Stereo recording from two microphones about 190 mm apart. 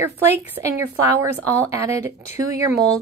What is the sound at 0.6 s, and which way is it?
Speech, 20° right (ahead or behind).